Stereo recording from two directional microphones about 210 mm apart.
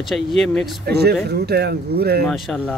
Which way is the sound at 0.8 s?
50° right (ahead or behind).